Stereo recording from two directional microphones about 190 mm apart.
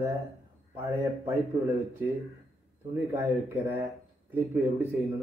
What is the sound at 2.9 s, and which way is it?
Speech, 15° right (ahead or behind).